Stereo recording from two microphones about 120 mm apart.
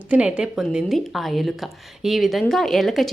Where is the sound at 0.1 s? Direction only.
10° right (ahead or behind).